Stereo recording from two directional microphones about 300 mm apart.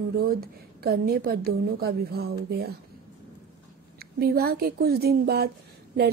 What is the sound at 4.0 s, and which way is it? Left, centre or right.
Speech, right.